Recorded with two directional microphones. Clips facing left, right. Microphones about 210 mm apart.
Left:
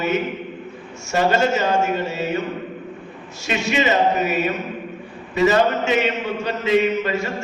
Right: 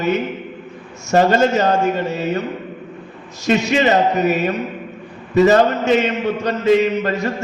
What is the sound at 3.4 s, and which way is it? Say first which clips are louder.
A man's voice: right 5 dB; 40° right (ahead or behind).